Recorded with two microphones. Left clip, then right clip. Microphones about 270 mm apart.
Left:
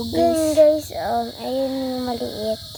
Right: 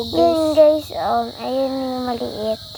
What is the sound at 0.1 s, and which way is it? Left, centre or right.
Child singing, centre.